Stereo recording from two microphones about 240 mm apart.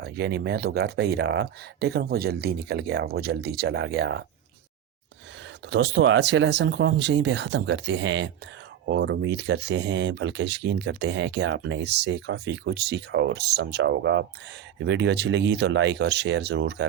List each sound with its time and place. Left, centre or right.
0.0 s speech: right
5.7 s speech: right